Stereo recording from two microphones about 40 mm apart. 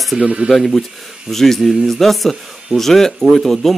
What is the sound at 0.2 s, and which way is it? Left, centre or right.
Speech, right.